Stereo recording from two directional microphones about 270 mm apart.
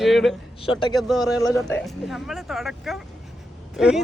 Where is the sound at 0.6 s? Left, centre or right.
Centre.